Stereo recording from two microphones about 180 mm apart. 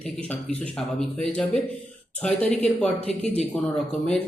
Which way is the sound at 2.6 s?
5° left (ahead or behind).